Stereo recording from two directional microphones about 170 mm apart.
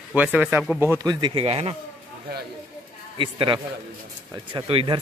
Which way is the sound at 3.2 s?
30° right (ahead or behind).